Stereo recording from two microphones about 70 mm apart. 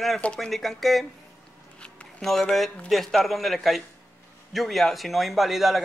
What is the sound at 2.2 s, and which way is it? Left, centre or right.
A man's voice, centre.